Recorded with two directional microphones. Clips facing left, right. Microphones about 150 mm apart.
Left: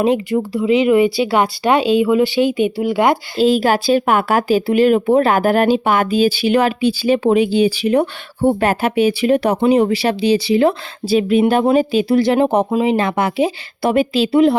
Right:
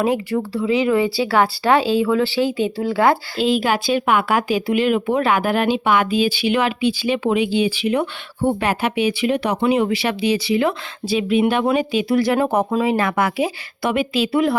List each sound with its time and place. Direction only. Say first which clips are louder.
0.0 s speech: left 4 dB; 20° left (ahead or behind)
3.3 s speech: left 5 dB; 40° left (ahead or behind)